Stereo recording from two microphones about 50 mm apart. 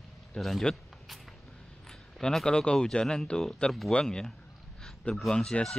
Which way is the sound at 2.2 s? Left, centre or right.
Centre.